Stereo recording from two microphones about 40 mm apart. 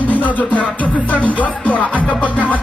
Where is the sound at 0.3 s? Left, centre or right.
Left.